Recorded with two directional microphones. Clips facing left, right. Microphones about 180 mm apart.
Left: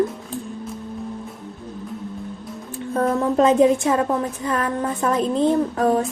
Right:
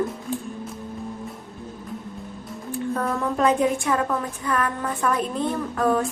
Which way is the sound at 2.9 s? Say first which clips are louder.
Left 8 dB; 25° left (ahead or behind).